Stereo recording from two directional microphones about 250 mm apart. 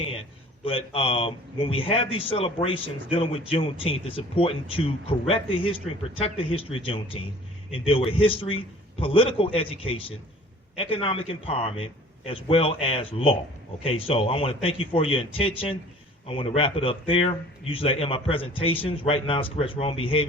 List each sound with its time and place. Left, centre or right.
0.6 s a man's voice: left